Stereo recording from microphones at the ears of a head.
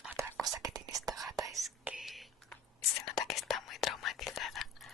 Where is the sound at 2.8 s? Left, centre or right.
Left.